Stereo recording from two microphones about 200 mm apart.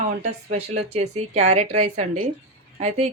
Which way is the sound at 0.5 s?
30° right (ahead or behind).